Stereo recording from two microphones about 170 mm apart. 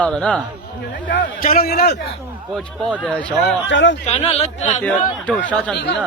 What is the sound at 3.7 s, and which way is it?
Speech, 90° left.